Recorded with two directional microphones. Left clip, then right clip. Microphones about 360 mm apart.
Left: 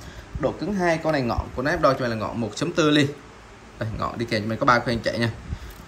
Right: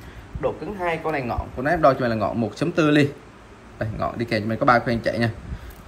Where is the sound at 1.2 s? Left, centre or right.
Centre.